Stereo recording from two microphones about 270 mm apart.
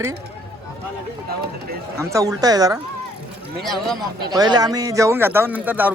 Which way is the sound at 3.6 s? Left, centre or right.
Centre.